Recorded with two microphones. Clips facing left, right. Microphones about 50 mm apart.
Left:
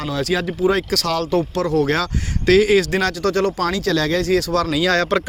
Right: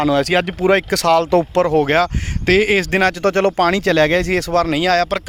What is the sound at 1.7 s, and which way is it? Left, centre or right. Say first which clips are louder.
Speech: right 4 dB; right.